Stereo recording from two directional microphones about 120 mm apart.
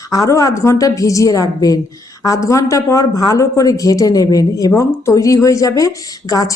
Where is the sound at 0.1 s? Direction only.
25° left (ahead or behind).